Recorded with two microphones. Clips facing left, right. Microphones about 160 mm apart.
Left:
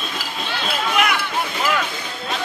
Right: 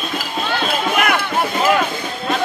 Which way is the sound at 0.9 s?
50° right (ahead or behind).